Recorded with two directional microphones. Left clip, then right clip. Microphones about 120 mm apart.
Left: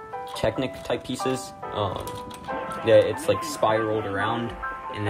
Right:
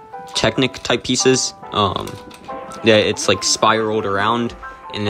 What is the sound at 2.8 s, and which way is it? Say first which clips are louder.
Speech: right 4 dB; 70° right (ahead or behind).